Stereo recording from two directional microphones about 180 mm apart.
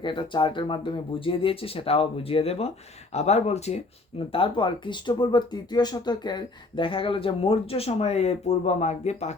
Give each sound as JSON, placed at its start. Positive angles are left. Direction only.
{"t": 0.0, "sound": "speech", "side_deg": 25}